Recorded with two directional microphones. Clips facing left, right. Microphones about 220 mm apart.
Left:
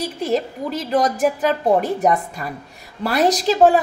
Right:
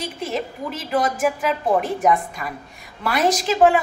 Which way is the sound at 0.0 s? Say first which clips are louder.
Left 5 dB; 35° left (ahead or behind).